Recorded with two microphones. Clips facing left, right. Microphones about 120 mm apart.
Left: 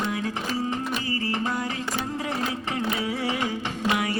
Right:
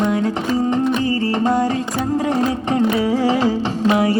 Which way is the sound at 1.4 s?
30° right (ahead or behind).